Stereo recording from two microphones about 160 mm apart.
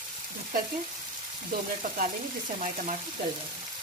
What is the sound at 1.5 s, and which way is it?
Speech, 55° right (ahead or behind).